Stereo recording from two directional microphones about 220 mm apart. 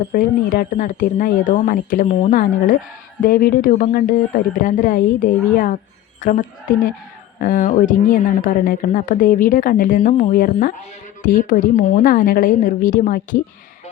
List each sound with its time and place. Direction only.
0.1 s a woman's voice: 40° left (ahead or behind)